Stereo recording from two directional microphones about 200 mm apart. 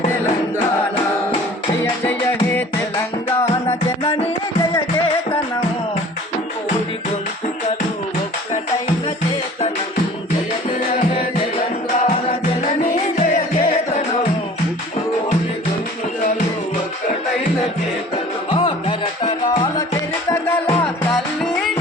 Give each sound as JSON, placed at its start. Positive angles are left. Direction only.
{"t": 1.8, "sound": "music", "side_deg": 10}
{"t": 12.0, "sound": "music", "side_deg": 30}
{"t": 18.5, "sound": "music", "side_deg": 25}